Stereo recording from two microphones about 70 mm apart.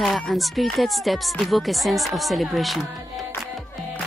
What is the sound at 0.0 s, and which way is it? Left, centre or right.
Speech, centre.